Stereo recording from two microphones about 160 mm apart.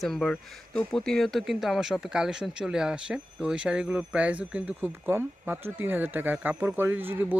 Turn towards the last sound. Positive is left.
turn(degrees=-10)  # may be behind; listen again after turning